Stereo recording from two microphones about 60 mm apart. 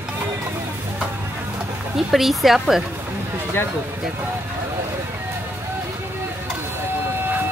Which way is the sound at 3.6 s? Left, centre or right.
Left.